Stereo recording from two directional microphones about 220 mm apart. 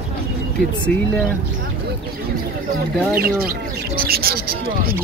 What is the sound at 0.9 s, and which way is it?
Speech, centre (ahead or behind).